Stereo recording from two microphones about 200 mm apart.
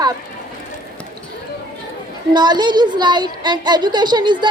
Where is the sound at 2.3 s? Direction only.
20° right (ahead or behind).